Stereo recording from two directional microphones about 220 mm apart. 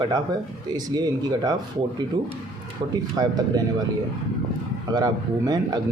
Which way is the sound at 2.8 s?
25° right (ahead or behind).